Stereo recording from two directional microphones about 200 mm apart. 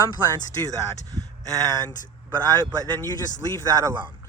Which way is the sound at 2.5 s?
15° right (ahead or behind).